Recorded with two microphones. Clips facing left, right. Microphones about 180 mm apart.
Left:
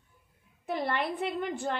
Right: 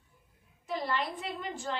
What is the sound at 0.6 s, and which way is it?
A woman's voice, 60° left (ahead or behind).